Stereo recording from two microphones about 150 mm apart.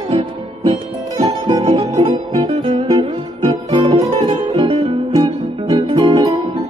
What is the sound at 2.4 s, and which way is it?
Music, 30° right (ahead or behind).